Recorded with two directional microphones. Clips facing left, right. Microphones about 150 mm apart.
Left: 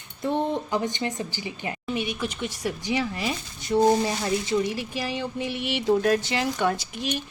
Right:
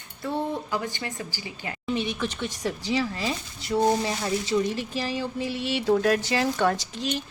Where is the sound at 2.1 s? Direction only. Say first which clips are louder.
Even; 10° left (ahead or behind).